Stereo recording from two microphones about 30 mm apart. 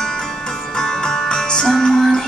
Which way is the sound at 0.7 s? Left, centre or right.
Centre.